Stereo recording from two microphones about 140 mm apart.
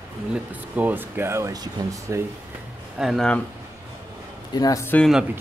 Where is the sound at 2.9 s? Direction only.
Centre (ahead or behind).